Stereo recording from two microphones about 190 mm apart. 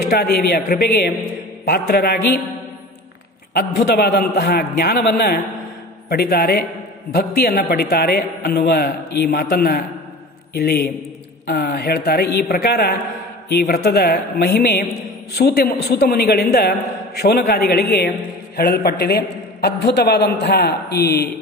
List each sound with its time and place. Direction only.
0.1 s a woman's voice: 55° left (ahead or behind)
3.5 s a man's voice: 55° left (ahead or behind)